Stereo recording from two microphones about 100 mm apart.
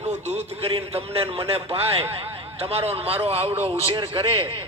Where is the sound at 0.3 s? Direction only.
90° right.